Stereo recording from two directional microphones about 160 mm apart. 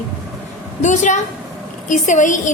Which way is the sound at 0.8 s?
50° left (ahead or behind).